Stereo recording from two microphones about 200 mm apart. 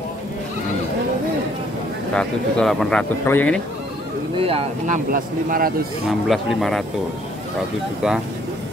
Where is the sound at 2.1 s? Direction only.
5° left (ahead or behind).